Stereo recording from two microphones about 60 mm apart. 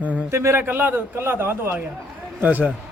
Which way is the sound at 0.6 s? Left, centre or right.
Right.